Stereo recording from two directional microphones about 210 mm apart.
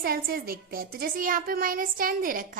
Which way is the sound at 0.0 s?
45° right (ahead or behind).